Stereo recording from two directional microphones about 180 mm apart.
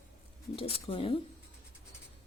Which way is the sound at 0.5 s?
30° left (ahead or behind).